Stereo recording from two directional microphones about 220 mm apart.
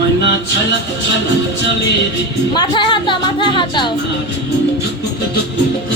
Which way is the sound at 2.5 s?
20° left (ahead or behind).